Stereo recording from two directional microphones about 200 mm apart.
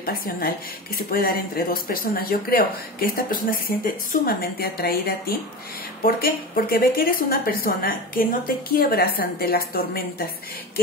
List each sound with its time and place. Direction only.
0.9 s a woman's voice: 45° left (ahead or behind)